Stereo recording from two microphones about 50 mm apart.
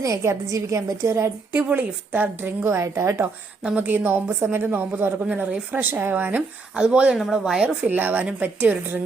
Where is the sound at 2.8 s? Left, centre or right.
Right.